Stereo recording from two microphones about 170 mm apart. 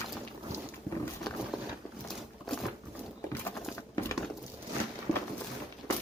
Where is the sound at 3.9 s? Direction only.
15° left (ahead or behind).